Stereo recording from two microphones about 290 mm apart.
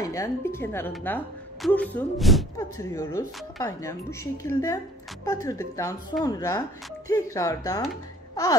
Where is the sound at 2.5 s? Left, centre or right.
Centre.